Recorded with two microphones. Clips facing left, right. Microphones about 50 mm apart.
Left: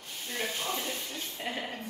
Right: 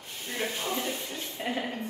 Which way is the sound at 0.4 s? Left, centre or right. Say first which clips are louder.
Right 2 dB; right.